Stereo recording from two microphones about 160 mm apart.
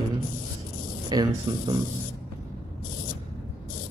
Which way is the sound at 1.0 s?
25° right (ahead or behind).